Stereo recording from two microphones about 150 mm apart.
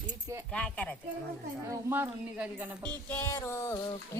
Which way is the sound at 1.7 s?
15° right (ahead or behind).